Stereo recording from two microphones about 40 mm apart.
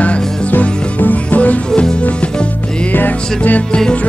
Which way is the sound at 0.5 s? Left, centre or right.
Left.